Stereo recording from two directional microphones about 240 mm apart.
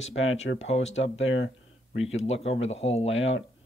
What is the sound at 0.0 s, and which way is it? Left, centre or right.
Speech, left.